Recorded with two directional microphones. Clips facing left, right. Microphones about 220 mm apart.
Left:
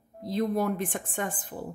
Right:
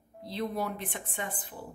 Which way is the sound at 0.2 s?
45° left (ahead or behind).